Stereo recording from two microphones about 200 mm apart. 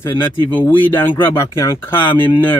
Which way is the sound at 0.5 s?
10° left (ahead or behind).